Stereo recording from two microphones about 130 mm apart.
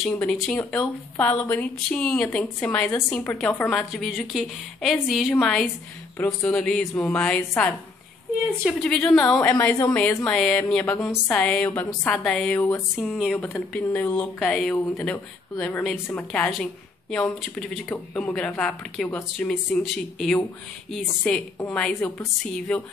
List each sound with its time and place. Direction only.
0.1 s speech: 10° left (ahead or behind)
2.2 s a woman's voice: 20° left (ahead or behind)
2.6 s a woman's voice: 10° left (ahead or behind)
6.1 s a woman's voice: 15° left (ahead or behind)
12.5 s a woman's voice: 20° left (ahead or behind)
12.9 s speech: centre (ahead or behind)
14.5 s a woman's voice: centre (ahead or behind)